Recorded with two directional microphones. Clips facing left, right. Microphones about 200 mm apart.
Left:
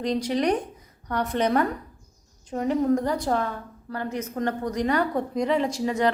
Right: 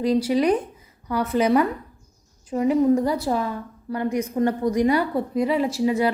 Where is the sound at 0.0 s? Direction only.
5° right (ahead or behind).